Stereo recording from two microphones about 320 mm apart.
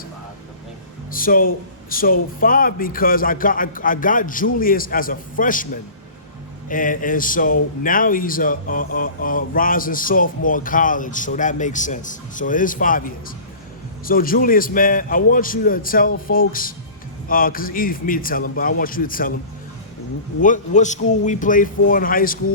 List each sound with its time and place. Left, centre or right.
1.1 s speech: left
20.4 s speech: left